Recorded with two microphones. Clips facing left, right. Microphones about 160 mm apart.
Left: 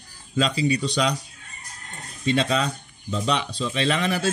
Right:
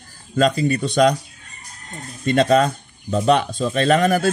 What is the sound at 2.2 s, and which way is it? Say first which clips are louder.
Speech: right 7 dB; 50° right (ahead or behind).